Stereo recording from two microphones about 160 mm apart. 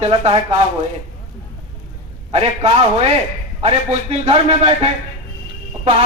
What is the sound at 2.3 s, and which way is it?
A man's voice, 40° right (ahead or behind).